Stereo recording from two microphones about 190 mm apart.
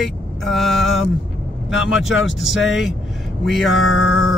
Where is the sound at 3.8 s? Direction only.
90° left.